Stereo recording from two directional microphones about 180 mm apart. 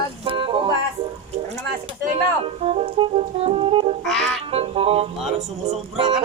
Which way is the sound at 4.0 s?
5° left (ahead or behind).